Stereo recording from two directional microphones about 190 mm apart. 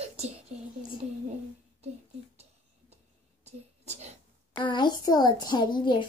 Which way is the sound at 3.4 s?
35° right (ahead or behind).